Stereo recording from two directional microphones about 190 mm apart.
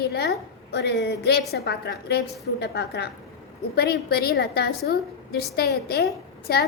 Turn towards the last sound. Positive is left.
turn(degrees=55)  # may be behind; listen again after turning